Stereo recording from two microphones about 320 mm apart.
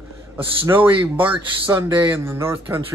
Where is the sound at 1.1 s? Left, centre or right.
Centre.